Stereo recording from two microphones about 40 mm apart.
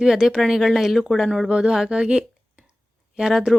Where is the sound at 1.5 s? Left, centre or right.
Centre.